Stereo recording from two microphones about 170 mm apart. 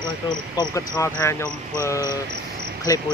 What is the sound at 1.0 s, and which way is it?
Speech, 15° left (ahead or behind).